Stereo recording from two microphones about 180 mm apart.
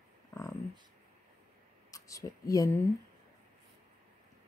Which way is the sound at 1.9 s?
20° left (ahead or behind).